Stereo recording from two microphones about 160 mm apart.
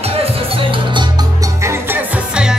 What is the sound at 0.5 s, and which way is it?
Music, 30° right (ahead or behind).